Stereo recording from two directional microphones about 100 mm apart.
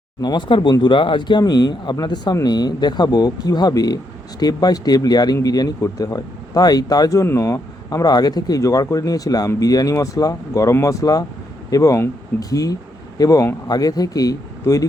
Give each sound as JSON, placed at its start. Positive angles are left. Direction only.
{"t": 0.2, "sound": "speech", "side_deg": 45}